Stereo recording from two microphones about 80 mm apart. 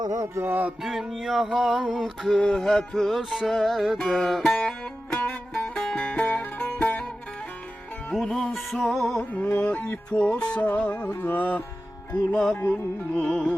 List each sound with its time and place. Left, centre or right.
0.0 s music: right
0.4 s music: right
0.8 s music: centre
8.1 s music: centre
9.3 s music: centre
12.1 s speech: centre
12.5 s music: left
13.1 s speech: centre